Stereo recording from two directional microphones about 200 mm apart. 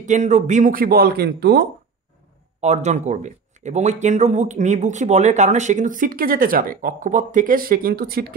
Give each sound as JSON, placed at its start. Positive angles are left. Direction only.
{"t": 0.0, "sound": "speech", "side_deg": -35}
{"t": 2.6, "sound": "speech", "side_deg": -35}